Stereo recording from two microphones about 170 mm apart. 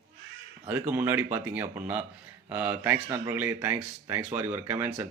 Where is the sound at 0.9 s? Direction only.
10° right (ahead or behind).